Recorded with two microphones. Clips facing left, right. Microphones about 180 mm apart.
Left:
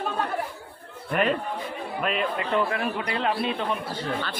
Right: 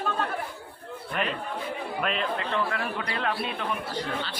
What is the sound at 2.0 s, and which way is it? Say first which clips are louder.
Speech: left 3 dB; 5° left (ahead or behind).